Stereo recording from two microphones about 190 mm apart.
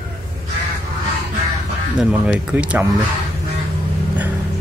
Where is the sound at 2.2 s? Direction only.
5° right (ahead or behind).